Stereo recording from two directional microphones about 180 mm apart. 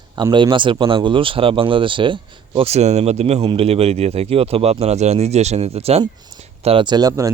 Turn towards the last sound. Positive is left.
turn(degrees=-20)  # may be behind; listen again after turning